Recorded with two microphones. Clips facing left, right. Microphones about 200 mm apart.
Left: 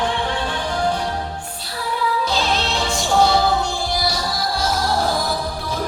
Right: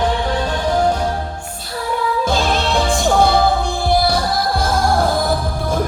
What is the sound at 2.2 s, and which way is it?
Music, 50° right (ahead or behind).